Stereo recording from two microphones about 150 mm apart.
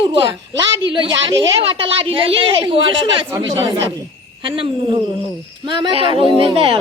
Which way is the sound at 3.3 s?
20° right (ahead or behind).